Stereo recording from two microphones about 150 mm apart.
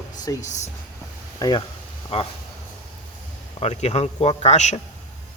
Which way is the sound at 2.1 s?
40° left (ahead or behind).